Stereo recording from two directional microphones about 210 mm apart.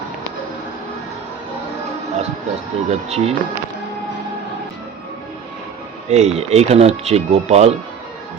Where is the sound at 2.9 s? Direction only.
30° right (ahead or behind).